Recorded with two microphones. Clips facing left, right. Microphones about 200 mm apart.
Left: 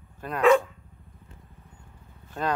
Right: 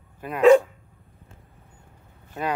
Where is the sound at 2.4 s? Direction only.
5° right (ahead or behind).